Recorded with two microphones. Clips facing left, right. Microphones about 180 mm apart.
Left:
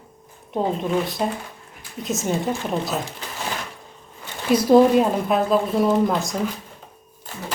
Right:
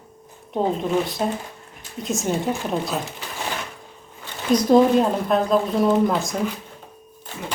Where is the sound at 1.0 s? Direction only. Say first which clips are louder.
Even; centre (ahead or behind).